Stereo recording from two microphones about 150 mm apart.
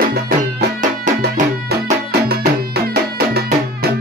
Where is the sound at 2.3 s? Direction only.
90° right.